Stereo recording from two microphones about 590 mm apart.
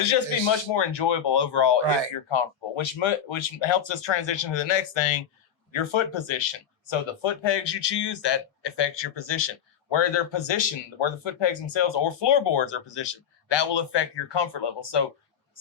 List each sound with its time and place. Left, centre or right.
0.0 s speech: left